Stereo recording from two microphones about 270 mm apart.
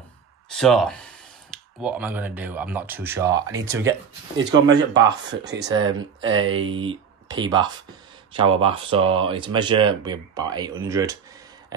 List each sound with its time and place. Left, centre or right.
0.5 s speech: centre
5.3 s speech: right
5.9 s speech: centre